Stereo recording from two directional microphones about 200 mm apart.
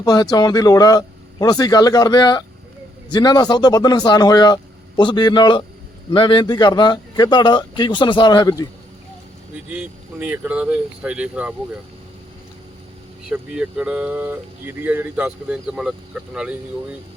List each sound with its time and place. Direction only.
0.0 s speech: 20° left (ahead or behind)
9.6 s speech: 5° right (ahead or behind)
13.2 s speech: 5° right (ahead or behind)